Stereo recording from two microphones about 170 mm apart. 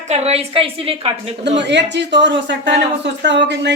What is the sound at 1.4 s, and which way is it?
Speech, 90° right.